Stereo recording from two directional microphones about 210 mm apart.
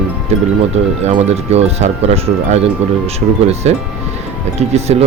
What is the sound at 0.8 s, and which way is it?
Speech, 30° right (ahead or behind).